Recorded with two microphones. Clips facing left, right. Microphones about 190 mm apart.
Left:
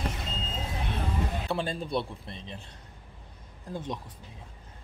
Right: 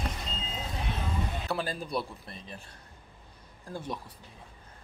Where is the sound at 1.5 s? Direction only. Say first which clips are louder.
Left 2 dB; 25° left (ahead or behind).